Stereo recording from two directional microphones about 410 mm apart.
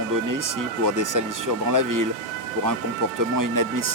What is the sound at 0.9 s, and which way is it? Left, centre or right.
Speech, right.